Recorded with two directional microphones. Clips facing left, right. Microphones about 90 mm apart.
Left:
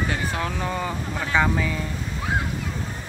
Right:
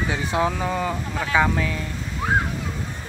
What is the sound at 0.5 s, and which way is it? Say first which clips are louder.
Speech: right 2 dB; centre (ahead or behind).